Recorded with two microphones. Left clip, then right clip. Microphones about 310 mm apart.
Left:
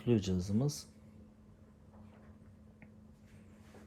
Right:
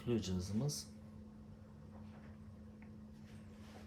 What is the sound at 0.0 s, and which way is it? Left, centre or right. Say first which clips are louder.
Speech: left 7 dB; left.